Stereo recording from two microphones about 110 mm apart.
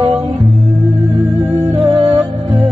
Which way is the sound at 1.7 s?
55° right (ahead or behind).